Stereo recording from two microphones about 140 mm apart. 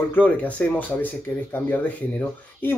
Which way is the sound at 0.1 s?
10° left (ahead or behind).